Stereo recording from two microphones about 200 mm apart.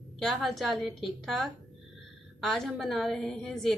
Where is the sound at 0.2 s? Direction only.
Centre (ahead or behind).